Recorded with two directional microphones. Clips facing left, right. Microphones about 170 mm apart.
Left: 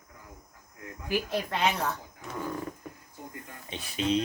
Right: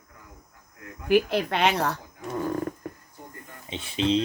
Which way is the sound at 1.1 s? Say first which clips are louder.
Right 8 dB; 75° right (ahead or behind).